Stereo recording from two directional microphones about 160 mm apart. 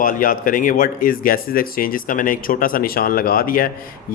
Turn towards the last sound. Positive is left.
turn(degrees=65)  # may be behind; listen again after turning